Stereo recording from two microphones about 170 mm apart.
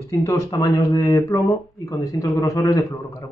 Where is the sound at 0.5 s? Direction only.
20° left (ahead or behind).